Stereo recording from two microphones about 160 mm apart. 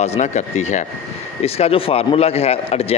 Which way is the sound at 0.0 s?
45° left (ahead or behind).